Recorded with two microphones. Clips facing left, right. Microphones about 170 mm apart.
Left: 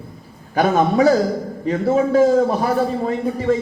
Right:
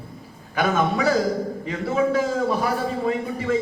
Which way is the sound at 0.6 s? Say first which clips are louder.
Left 6 dB; 35° left (ahead or behind).